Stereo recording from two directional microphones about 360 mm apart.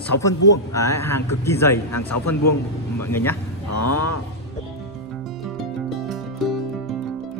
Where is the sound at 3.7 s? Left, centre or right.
Left.